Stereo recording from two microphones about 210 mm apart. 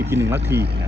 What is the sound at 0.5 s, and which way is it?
Speech, 50° right (ahead or behind).